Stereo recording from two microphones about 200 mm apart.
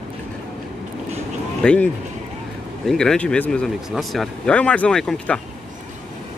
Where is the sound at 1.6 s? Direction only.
5° left (ahead or behind).